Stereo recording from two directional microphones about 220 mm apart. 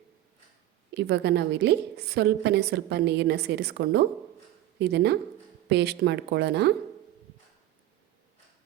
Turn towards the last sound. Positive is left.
turn(degrees=-50)  # may be behind; listen again after turning